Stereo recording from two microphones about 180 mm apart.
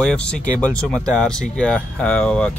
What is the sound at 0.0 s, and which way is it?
Speech, 5° left (ahead or behind).